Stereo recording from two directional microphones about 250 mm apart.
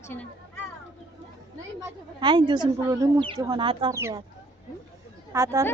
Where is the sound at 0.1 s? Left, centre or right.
Centre.